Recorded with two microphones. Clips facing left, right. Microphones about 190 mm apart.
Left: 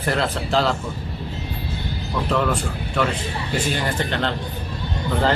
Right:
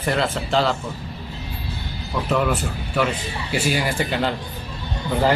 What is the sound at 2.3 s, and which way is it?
Speech, 5° right (ahead or behind).